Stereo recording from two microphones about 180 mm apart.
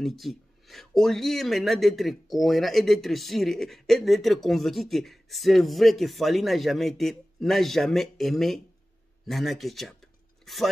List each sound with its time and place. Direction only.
0.0 s speech: centre (ahead or behind)